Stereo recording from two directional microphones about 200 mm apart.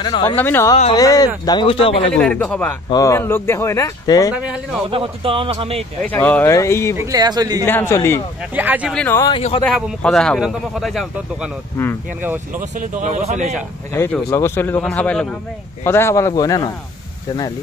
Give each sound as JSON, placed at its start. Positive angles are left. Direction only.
{"t": 0.0, "sound": "speech", "side_deg": 20}
{"t": 0.4, "sound": "speech", "side_deg": 10}
{"t": 2.1, "sound": "speech", "side_deg": 5}
{"t": 2.9, "sound": "speech", "side_deg": 15}
{"t": 4.8, "sound": "speech", "side_deg": -25}
{"t": 6.0, "sound": "speech", "side_deg": 5}
{"t": 7.0, "sound": "speech", "side_deg": -20}
{"t": 7.6, "sound": "speech", "side_deg": 10}
{"t": 8.5, "sound": "speech", "side_deg": -10}
{"t": 8.9, "sound": "a man's voice", "side_deg": 10}
{"t": 12.5, "sound": "speech", "side_deg": -40}
{"t": 13.9, "sound": "speech", "side_deg": 10}